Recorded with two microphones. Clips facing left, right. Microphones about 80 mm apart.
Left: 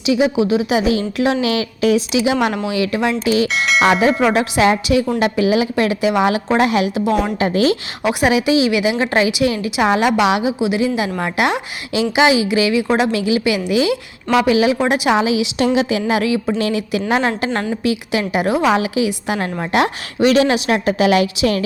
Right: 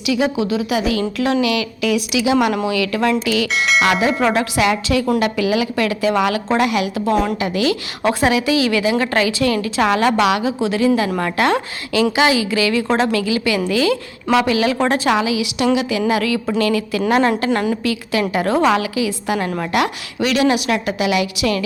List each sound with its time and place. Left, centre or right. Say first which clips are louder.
0.0 s a woman's voice: left 3 dB; left
3.5 s speech: left 1 dB; centre
4.1 s speech: left 2 dB; centre
4.6 s a woman's voice: left 4 dB; left
8.0 s a woman's voice: left 1 dB; left
15.2 s a woman's voice: left 2 dB; left
18.8 s a woman's voice: left 2 dB; left